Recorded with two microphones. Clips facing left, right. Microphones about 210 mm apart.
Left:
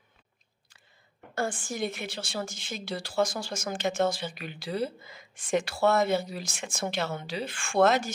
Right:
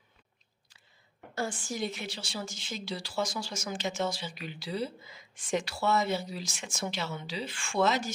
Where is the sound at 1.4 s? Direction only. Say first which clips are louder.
Left 3 dB; 50° left (ahead or behind).